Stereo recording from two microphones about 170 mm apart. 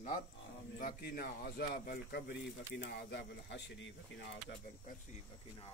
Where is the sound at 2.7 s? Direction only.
85° left.